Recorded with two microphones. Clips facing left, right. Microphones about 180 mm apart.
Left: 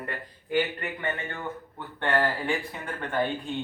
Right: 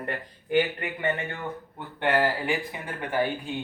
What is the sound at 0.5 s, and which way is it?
Speech, 20° right (ahead or behind).